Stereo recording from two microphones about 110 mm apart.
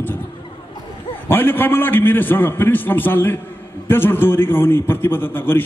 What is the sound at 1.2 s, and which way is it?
A man's voice, 20° left (ahead or behind).